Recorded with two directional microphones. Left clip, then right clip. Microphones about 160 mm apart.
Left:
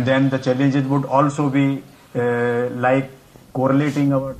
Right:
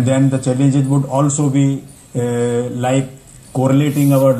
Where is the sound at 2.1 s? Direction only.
25° left (ahead or behind).